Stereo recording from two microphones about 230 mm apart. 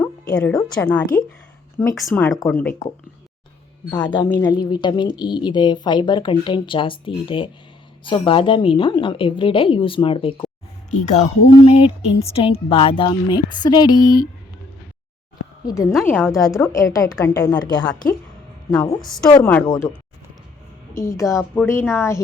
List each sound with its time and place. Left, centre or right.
0.0 s music: centre
0.8 s a woman's voice: centre
3.9 s a woman's voice: left
4.3 s a woman's voice: centre
15.6 s a woman's voice: centre
15.9 s a woman's voice: centre
19.0 s a woman's voice: centre
20.9 s a woman's voice: centre